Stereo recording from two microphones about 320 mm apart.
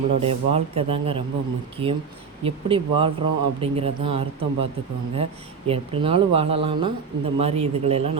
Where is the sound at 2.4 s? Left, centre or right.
Centre.